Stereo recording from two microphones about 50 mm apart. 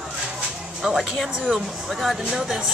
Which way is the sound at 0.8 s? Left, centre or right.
Centre.